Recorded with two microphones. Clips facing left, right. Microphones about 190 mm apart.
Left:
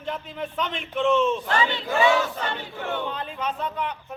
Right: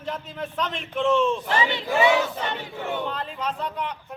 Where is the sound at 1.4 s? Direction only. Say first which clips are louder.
Even; 20° right (ahead or behind).